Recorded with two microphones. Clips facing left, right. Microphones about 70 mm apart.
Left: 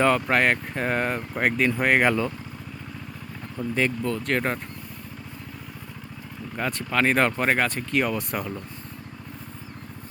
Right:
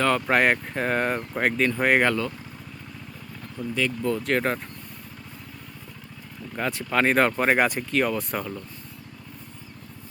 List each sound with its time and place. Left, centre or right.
0.3 s speech: centre
2.0 s speech: centre
3.6 s speech: left
4.0 s speech: centre
6.6 s speech: centre